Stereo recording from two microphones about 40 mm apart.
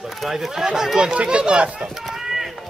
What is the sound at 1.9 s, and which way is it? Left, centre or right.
Chop, centre.